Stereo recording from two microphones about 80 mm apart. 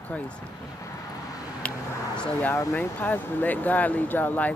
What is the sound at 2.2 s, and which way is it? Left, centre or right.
Speech, left.